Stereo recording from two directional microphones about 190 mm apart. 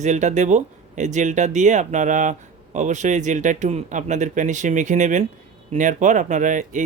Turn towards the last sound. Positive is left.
turn(degrees=-40)  # may be behind; listen again after turning